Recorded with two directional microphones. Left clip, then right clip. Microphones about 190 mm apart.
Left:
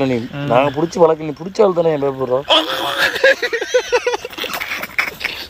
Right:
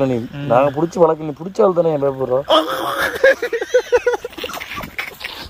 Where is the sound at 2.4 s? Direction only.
45° right (ahead or behind).